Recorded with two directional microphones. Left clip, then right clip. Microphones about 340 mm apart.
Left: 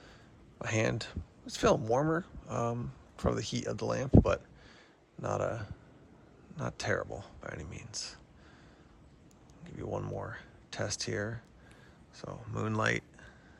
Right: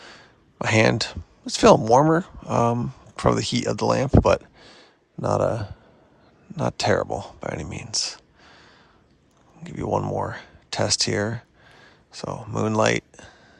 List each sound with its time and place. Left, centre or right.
0.0 s speech: right
9.6 s speech: centre